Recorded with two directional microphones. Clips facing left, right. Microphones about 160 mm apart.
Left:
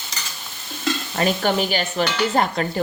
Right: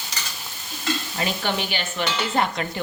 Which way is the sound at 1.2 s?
45° left (ahead or behind).